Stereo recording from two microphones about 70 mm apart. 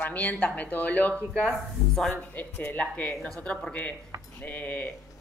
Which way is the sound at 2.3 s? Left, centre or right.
Left.